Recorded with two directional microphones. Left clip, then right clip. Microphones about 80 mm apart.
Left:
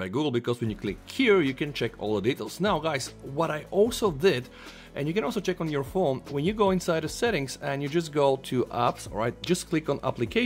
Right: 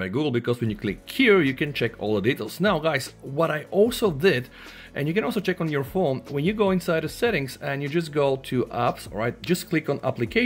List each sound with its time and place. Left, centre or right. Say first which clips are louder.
0.0 s speech: right 3 dB; left
8.8 s speech: right 2 dB; left